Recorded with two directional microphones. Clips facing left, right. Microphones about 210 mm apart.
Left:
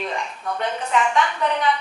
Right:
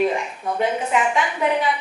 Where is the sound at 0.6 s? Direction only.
10° right (ahead or behind).